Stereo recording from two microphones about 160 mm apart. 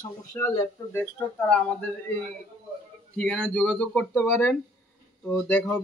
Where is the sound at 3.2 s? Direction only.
5° left (ahead or behind).